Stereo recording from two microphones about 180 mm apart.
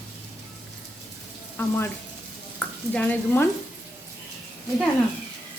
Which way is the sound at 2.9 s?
10° left (ahead or behind).